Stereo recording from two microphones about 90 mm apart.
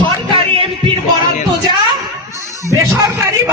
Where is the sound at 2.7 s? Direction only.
40° right (ahead or behind).